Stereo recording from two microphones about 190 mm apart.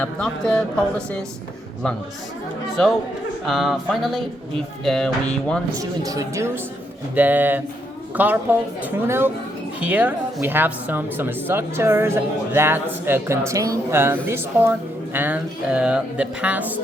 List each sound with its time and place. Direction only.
0.0 s speech: 5° left (ahead or behind)
3.4 s speech: centre (ahead or behind)
5.8 s speech: 20° right (ahead or behind)